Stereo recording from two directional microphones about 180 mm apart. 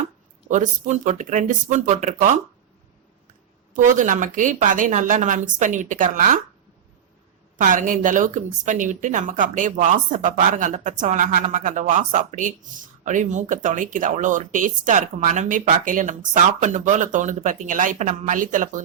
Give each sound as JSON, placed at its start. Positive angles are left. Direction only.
{"t": 0.5, "sound": "speech", "side_deg": -40}
{"t": 3.8, "sound": "speech", "side_deg": -45}
{"t": 7.6, "sound": "speech", "side_deg": -45}